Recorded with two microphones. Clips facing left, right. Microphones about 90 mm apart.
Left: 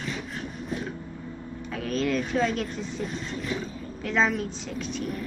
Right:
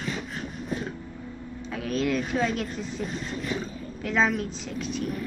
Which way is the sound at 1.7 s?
Centre (ahead or behind).